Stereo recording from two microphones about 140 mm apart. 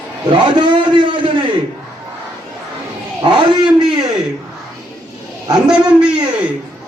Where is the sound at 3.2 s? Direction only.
35° right (ahead or behind).